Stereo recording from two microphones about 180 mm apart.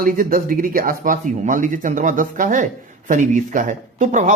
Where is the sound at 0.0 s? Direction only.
55° right (ahead or behind).